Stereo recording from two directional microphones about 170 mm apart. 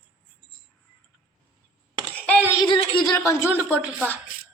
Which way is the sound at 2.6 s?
25° left (ahead or behind).